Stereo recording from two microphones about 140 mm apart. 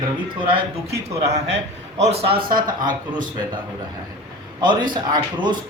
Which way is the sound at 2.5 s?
80° right.